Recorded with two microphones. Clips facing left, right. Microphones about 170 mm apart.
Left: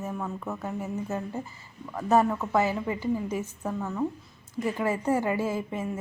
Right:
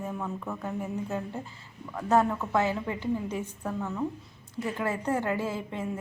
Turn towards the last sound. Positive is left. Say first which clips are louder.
# left 2 dB
turn(degrees=5)  # may be behind; listen again after turning